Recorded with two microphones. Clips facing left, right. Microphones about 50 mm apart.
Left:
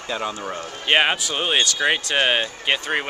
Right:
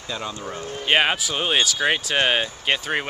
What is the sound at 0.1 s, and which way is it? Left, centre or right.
Speech, left.